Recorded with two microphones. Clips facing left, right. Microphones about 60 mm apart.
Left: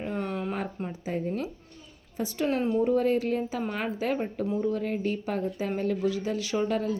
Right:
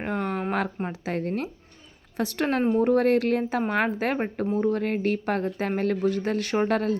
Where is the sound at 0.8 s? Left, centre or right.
Right.